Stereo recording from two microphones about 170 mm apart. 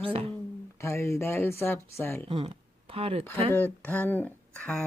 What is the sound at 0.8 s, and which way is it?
Speech, 15° left (ahead or behind).